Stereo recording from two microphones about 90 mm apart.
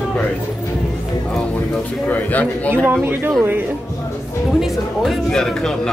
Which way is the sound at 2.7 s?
20° right (ahead or behind).